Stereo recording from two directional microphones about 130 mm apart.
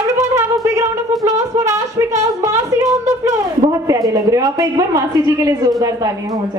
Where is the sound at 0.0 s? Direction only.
25° right (ahead or behind).